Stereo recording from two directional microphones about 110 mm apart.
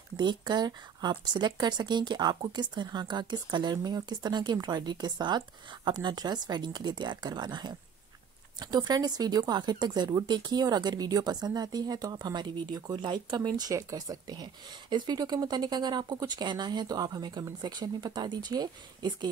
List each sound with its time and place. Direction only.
0.2 s speech: 40° right (ahead or behind)
13.6 s speech: 35° right (ahead or behind)